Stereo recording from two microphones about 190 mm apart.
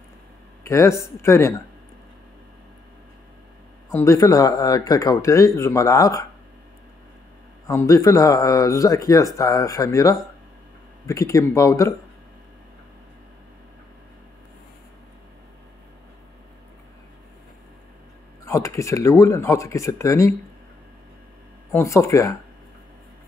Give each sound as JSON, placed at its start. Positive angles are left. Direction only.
{"t": 0.7, "sound": "speech", "side_deg": 15}
{"t": 3.9, "sound": "speech", "side_deg": 15}
{"t": 7.6, "sound": "speech", "side_deg": 15}
{"t": 18.4, "sound": "speech", "side_deg": 15}
{"t": 21.7, "sound": "speech", "side_deg": 15}